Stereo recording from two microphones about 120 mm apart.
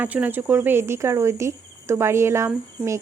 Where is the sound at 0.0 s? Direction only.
15° right (ahead or behind).